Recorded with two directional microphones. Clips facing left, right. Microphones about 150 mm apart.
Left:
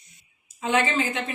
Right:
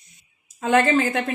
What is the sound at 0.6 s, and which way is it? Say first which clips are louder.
Speech: right 5 dB; 50° right (ahead or behind).